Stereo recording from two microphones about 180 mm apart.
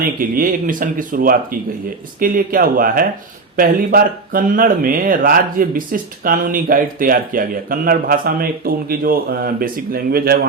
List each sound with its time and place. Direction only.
0.0 s speech: 50° right (ahead or behind)